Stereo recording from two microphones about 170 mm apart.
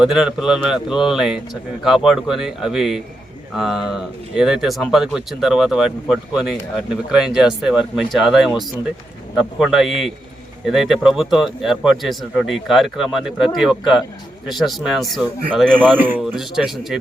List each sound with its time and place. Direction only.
0.0 s speech: 5° right (ahead or behind)